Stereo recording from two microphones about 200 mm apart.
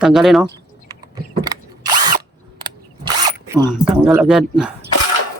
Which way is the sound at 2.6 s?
25° right (ahead or behind).